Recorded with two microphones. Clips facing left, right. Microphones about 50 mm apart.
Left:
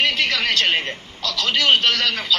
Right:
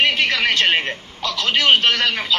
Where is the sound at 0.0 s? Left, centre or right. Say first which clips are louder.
Right 2 dB; right.